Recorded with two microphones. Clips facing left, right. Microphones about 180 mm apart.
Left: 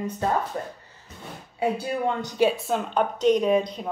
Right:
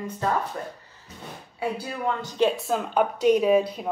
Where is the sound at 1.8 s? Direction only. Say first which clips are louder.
Left 3 dB; 20° left (ahead or behind).